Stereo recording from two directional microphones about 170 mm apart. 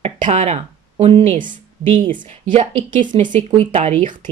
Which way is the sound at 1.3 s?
50° right (ahead or behind).